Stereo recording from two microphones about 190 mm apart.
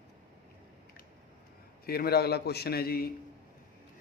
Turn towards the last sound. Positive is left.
turn(degrees=50)  # may be behind; listen again after turning